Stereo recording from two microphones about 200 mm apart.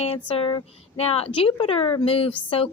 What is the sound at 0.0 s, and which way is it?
A woman's voice, 30° left (ahead or behind).